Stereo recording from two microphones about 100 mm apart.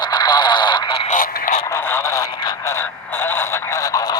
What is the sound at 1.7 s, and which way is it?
Speech, 25° left (ahead or behind).